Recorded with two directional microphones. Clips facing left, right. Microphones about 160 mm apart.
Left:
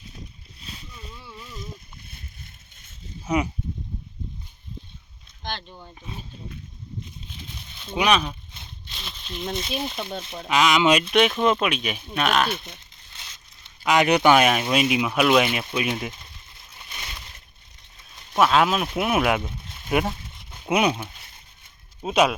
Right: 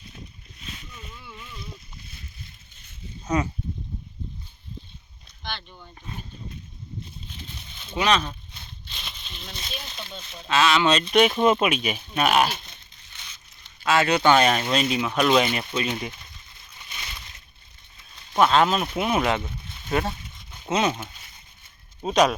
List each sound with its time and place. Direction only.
1.1 s a sound: 35° left (ahead or behind); by 2.2 s 50° left (ahead or behind)
3.2 s speech: 10° left (ahead or behind)
5.4 s speech: 40° left (ahead or behind)
7.9 s speech: 10° left (ahead or behind)
8.9 s a sound: centre (ahead or behind)
9.4 s speech: 55° left (ahead or behind)
10.5 s speech: 15° left (ahead or behind)
11.0 s speech: centre (ahead or behind)
13.8 s speech: 15° left (ahead or behind)
18.3 s speech: 5° left (ahead or behind)